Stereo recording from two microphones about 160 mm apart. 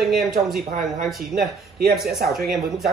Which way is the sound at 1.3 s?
75° right (ahead or behind).